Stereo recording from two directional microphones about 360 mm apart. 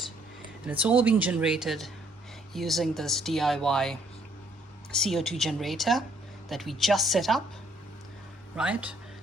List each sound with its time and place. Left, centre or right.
0.6 s speech: centre
8.5 s speech: centre